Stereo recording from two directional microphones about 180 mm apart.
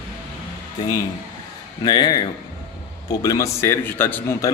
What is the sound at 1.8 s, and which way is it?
A man's voice, 25° left (ahead or behind).